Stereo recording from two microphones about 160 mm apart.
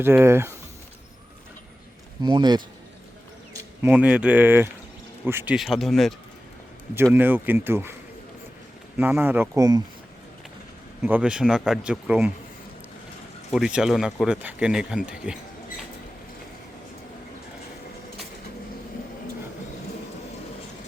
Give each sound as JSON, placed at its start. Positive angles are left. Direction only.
{"t": 0.0, "sound": "speech", "side_deg": -15}
{"t": 2.2, "sound": "a man's voice", "side_deg": -25}
{"t": 3.5, "sound": "speech", "side_deg": -15}
{"t": 5.5, "sound": "speech", "side_deg": 0}
{"t": 6.9, "sound": "speech", "side_deg": -15}
{"t": 9.0, "sound": "speech", "side_deg": -10}
{"t": 11.0, "sound": "speech", "side_deg": -10}
{"t": 13.5, "sound": "speech", "side_deg": -5}